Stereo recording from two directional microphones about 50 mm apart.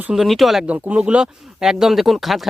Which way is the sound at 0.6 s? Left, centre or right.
Right.